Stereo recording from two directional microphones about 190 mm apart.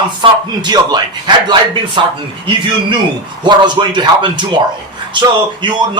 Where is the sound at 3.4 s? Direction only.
25° right (ahead or behind).